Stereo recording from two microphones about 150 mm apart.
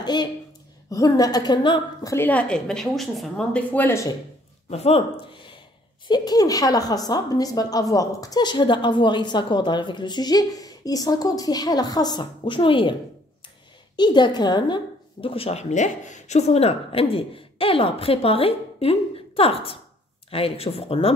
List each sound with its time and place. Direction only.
0.0 s a woman's voice: 30° left (ahead or behind)
2.1 s a woman's voice: 10° left (ahead or behind)
4.6 s a woman's voice: 45° left (ahead or behind)
13.9 s speech: 30° left (ahead or behind)